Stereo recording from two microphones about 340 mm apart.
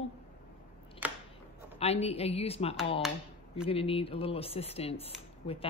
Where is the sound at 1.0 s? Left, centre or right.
Centre.